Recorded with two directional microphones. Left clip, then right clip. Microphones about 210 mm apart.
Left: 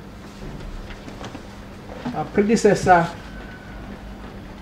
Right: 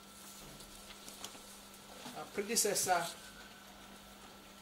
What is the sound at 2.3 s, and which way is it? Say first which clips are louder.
Speech: left 18 dB; 30° right (ahead or behind).